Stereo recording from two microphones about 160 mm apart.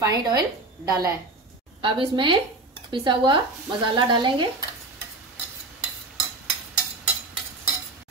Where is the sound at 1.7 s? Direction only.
35° right (ahead or behind).